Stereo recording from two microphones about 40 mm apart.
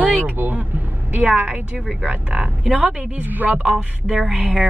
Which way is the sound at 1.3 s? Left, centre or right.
Right.